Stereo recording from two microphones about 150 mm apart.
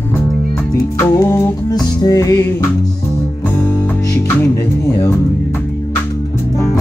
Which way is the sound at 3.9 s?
15° left (ahead or behind).